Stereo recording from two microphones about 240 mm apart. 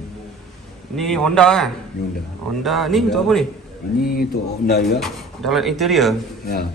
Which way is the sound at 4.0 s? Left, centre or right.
Left.